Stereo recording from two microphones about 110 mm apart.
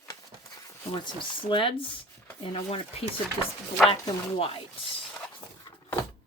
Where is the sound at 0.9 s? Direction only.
45° left (ahead or behind).